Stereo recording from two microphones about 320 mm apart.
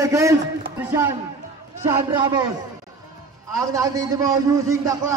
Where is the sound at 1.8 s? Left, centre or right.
Centre.